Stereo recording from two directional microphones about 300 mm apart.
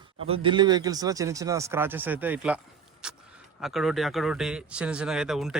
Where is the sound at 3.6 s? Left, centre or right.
Centre.